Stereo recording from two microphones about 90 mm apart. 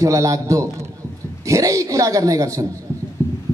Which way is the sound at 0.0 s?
35° right (ahead or behind).